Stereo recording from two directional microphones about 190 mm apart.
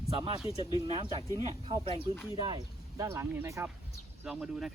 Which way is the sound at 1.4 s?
30° right (ahead or behind).